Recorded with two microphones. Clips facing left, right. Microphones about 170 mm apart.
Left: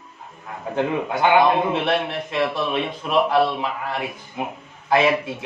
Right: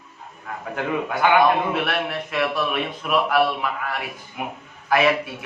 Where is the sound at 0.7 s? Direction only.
25° left (ahead or behind).